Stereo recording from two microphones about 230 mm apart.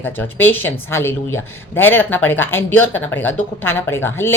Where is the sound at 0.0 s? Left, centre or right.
Centre.